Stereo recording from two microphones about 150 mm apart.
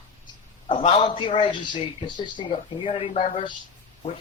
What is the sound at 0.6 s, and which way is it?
A man's voice, 35° left (ahead or behind).